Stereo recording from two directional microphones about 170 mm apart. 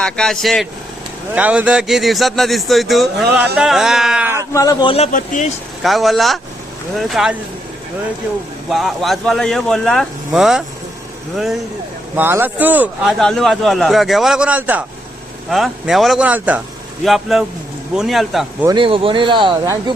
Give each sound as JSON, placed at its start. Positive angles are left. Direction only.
{"t": 0.0, "sound": "a man's voice", "side_deg": 5}
{"t": 4.5, "sound": "a man's voice", "side_deg": 20}
{"t": 5.1, "sound": "speech", "side_deg": 50}
{"t": 5.8, "sound": "a man's voice", "side_deg": 0}
{"t": 8.7, "sound": "a man's voice", "side_deg": 0}
{"t": 12.1, "sound": "a man's voice", "side_deg": -10}
{"t": 18.7, "sound": "speech", "side_deg": -30}